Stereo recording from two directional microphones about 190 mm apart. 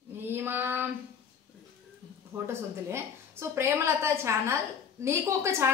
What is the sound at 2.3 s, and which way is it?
A woman's voice, 15° right (ahead or behind).